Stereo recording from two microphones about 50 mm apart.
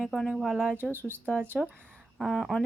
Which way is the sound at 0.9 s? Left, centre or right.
Right.